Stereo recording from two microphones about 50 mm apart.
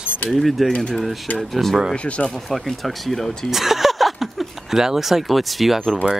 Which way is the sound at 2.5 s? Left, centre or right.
Centre.